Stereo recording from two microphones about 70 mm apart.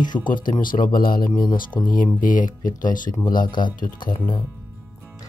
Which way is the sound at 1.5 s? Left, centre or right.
Left.